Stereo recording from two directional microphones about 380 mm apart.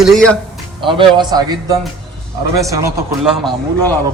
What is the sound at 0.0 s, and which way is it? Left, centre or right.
Speech, centre.